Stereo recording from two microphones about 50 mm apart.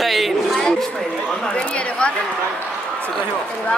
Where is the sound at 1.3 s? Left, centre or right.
Centre.